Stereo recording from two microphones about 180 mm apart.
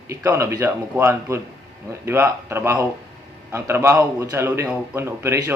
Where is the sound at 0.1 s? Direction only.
15° right (ahead or behind).